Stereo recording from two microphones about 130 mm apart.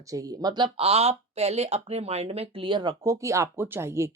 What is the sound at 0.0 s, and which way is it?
Speech, 25° right (ahead or behind).